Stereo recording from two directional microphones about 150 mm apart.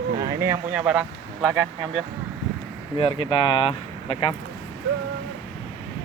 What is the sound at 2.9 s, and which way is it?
Speech, 35° left (ahead or behind).